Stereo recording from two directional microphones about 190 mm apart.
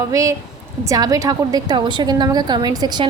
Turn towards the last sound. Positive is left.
turn(degrees=-20)  # may be behind; listen again after turning